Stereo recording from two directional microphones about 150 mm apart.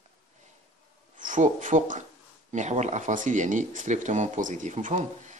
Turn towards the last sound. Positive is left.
turn(degrees=-50)  # may be behind; listen again after turning